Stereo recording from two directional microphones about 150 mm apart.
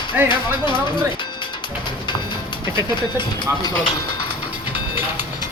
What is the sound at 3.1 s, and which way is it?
Speech, 25° left (ahead or behind).